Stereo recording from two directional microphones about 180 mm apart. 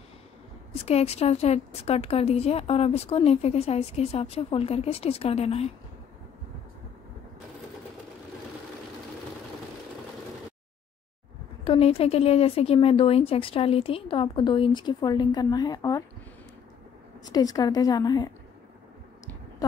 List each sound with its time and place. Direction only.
0.7 s speech: 35° left (ahead or behind)
11.6 s speech: 30° left (ahead or behind)
17.2 s a woman's voice: 20° left (ahead or behind)